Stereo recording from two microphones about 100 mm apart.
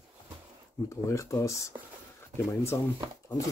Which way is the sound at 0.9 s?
30° left (ahead or behind).